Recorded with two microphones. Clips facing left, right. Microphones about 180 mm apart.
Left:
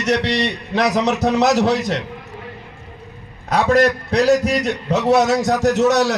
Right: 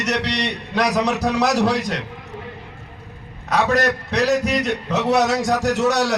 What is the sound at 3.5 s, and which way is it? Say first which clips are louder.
A man's voice: left 4 dB; 30° left (ahead or behind).